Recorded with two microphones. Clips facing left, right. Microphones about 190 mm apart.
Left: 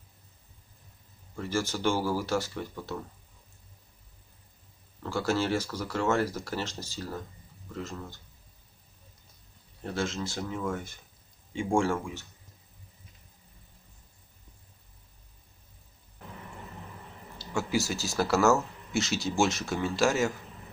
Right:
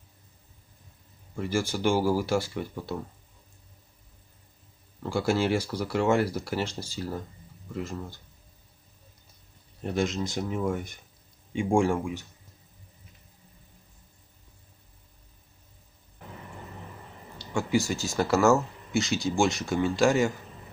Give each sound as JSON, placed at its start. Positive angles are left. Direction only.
{"t": 1.3, "sound": "speech", "side_deg": -10}
{"t": 5.0, "sound": "speech", "side_deg": -15}
{"t": 9.8, "sound": "speech", "side_deg": -20}
{"t": 17.4, "sound": "speech", "side_deg": 0}